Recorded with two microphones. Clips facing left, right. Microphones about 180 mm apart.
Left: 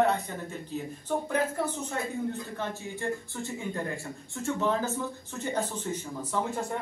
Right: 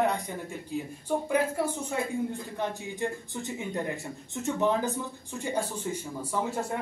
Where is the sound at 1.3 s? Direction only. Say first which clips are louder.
Right 3 dB; 10° right (ahead or behind).